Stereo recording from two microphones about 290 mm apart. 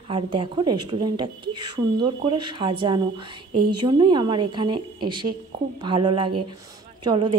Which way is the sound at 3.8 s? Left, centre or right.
Centre.